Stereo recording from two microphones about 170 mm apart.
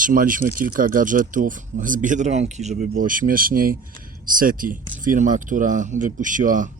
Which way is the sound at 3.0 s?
55° right (ahead or behind).